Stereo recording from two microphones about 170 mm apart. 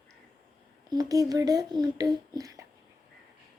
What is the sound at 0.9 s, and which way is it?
Speech, 20° right (ahead or behind).